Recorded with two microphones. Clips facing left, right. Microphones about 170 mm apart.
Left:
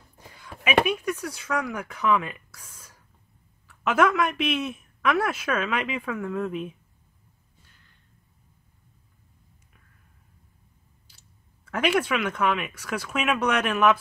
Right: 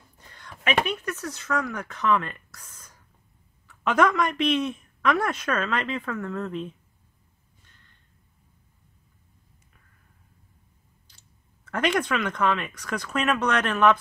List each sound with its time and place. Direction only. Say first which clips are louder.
0.2 s a sound: even; 10° left (ahead or behind)
0.8 s speech: left 3 dB; 10° left (ahead or behind)
11.1 s speech: left 1 dB; 5° left (ahead or behind)